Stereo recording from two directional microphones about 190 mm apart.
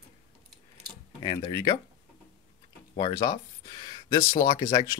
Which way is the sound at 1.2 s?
20° left (ahead or behind).